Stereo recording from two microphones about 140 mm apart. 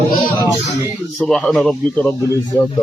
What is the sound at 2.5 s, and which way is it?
Speech, 15° left (ahead or behind).